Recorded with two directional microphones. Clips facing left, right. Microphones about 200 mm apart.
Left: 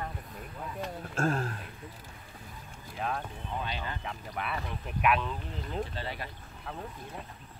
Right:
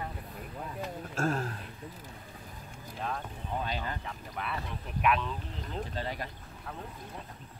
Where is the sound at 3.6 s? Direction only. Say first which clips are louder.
Right 2 dB; 40° right (ahead or behind).